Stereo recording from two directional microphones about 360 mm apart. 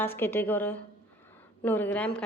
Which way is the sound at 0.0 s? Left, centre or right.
Centre.